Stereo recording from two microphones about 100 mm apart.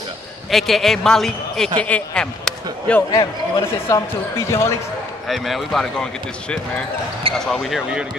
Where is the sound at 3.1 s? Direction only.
35° left (ahead or behind).